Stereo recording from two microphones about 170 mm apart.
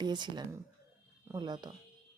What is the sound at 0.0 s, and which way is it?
A woman's voice, 25° right (ahead or behind).